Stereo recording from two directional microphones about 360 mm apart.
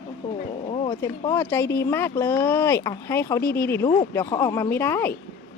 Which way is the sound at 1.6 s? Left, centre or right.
Left.